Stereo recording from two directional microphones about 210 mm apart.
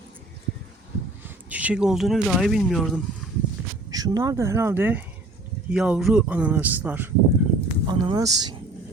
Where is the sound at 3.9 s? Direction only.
15° right (ahead or behind).